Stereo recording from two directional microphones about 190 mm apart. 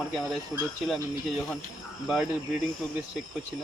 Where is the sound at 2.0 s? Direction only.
Centre (ahead or behind).